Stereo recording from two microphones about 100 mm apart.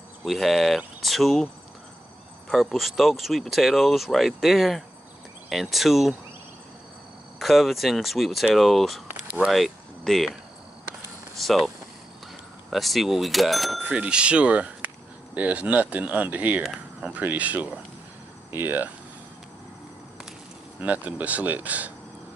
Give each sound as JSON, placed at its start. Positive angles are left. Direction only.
{"t": 0.2, "sound": "speech", "side_deg": 0}
{"t": 2.5, "sound": "speech", "side_deg": 0}
{"t": 7.3, "sound": "speech", "side_deg": 0}
{"t": 11.4, "sound": "speech", "side_deg": 0}
{"t": 20.8, "sound": "speech", "side_deg": -15}